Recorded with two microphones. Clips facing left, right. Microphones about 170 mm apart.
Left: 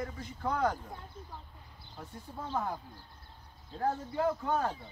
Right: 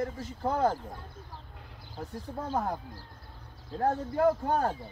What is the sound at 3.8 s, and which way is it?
Speech, 55° right (ahead or behind).